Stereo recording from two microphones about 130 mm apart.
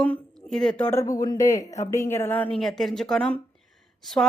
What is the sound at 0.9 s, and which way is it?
A woman's voice, 25° left (ahead or behind).